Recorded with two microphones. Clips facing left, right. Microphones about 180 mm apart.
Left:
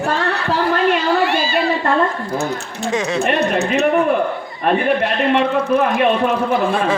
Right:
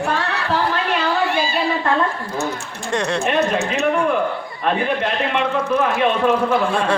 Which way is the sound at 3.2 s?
65° left (ahead or behind).